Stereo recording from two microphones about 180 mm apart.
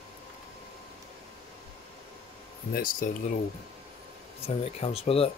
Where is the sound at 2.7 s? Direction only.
50° left (ahead or behind).